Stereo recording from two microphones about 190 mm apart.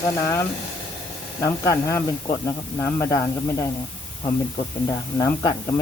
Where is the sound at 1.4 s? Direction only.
15° left (ahead or behind).